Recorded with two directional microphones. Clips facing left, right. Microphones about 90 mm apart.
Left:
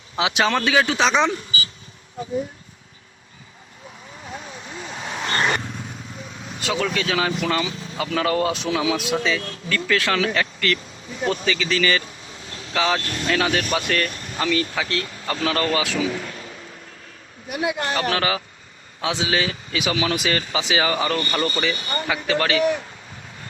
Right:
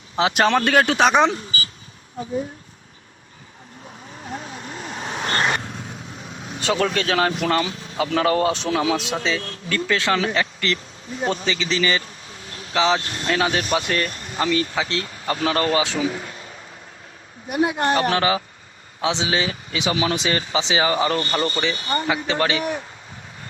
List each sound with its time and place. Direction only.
0.2 s speech: 40° right (ahead or behind)
0.7 s speech: 55° right (ahead or behind)
1.3 s a sound: 40° right (ahead or behind)
4.9 s vehicle: 35° right (ahead or behind)
6.7 s speech: 40° right (ahead or behind)
7.9 s speech: 30° right (ahead or behind)
17.5 s speech: 40° right (ahead or behind)
17.9 s speech: 25° right (ahead or behind)